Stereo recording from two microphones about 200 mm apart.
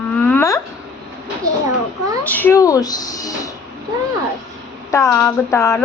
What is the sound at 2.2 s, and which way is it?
A woman's voice, 10° left (ahead or behind).